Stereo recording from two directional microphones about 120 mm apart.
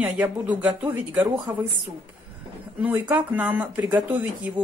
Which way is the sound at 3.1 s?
15° right (ahead or behind).